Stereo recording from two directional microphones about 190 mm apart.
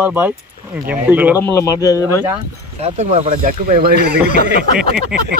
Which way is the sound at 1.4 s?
15° left (ahead or behind).